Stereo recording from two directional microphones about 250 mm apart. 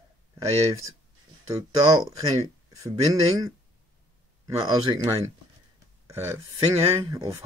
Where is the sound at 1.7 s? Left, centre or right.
Centre.